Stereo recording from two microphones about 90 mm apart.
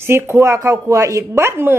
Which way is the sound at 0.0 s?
30° right (ahead or behind).